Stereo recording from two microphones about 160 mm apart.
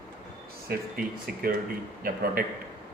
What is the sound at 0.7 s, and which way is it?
A man's voice, 65° right (ahead or behind).